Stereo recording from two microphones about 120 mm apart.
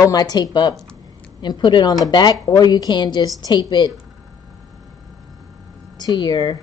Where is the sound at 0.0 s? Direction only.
30° left (ahead or behind).